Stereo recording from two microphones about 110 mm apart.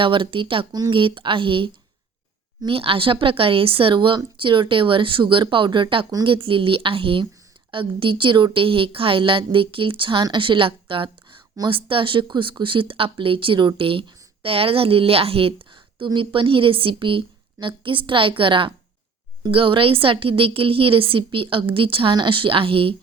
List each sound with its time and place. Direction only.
0.0 s a woman's voice: 50° right (ahead or behind)